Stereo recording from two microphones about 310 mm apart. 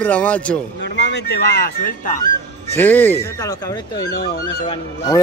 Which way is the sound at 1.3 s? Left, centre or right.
Left.